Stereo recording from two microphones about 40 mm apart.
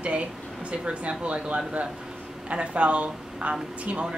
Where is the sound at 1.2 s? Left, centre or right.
Right.